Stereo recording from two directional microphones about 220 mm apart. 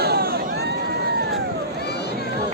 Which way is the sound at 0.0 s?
45° right (ahead or behind).